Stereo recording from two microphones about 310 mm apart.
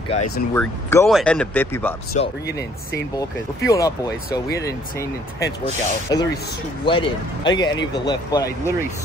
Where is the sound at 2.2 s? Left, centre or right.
Left.